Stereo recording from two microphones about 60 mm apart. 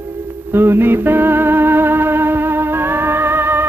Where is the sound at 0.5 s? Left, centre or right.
Right.